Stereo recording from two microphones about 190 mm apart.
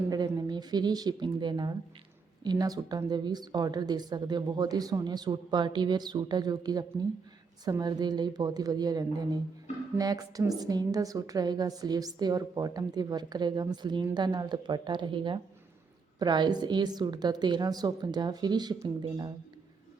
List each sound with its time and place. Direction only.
0.1 s a woman's voice: 20° right (ahead or behind)